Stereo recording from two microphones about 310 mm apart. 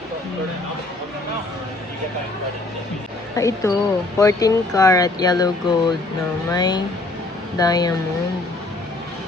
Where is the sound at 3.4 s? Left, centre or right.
Centre.